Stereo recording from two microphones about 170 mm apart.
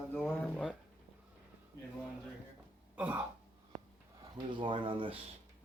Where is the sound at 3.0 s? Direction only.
10° right (ahead or behind).